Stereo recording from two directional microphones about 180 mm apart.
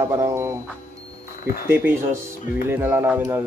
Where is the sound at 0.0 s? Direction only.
15° right (ahead or behind).